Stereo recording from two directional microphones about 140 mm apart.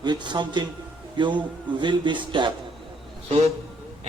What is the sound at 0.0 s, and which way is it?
Speech, 30° right (ahead or behind).